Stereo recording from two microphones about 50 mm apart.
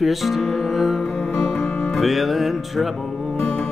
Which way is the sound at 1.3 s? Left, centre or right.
Centre.